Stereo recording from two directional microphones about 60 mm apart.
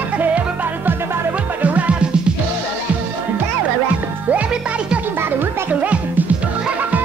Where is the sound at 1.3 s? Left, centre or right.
Right.